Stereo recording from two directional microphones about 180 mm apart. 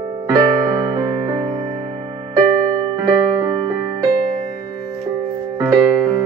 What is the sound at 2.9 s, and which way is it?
Music, 20° right (ahead or behind).